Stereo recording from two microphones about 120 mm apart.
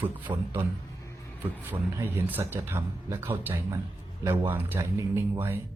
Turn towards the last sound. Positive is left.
turn(degrees=-20)  # may be behind; listen again after turning